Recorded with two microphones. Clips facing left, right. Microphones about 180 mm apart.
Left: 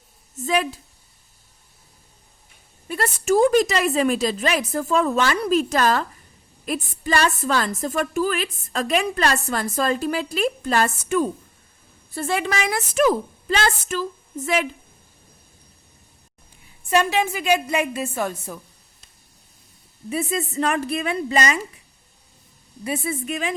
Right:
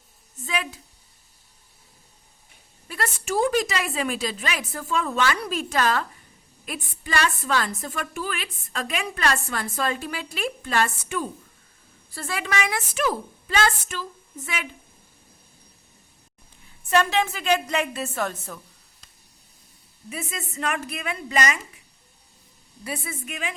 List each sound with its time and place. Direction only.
0.4 s a woman's voice: 35° left (ahead or behind)
3.2 s a woman's voice: 45° left (ahead or behind)
12.1 s a woman's voice: 25° left (ahead or behind); by 14.7 s 40° left (ahead or behind)
16.9 s a woman's voice: 15° left (ahead or behind)
20.1 s a woman's voice: 35° left (ahead or behind)
22.8 s a woman's voice: 25° left (ahead or behind)
23.2 s a woman's voice: 35° left (ahead or behind)